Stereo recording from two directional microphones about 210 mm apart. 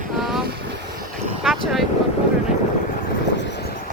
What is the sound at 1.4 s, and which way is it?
Speech, centre (ahead or behind).